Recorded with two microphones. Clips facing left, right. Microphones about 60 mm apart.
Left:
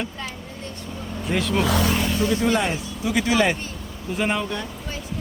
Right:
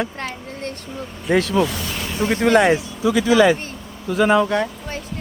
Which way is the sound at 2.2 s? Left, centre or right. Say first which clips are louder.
Right 8 dB; right.